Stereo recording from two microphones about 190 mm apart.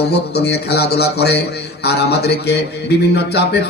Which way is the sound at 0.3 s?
60° left (ahead or behind).